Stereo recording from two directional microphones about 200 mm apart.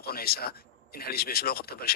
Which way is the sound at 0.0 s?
50° left (ahead or behind).